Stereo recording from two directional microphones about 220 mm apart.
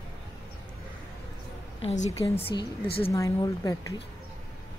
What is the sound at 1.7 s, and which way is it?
Speech, 30° left (ahead or behind).